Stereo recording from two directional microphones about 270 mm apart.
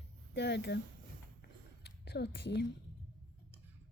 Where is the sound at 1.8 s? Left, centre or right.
Left.